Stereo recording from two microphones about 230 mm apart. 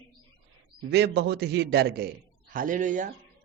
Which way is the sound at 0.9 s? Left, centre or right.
Right.